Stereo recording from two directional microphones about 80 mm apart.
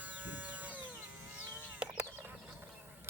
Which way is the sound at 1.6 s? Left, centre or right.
Centre.